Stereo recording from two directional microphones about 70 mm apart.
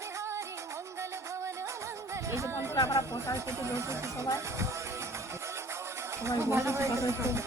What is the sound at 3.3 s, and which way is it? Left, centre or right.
Speech, right.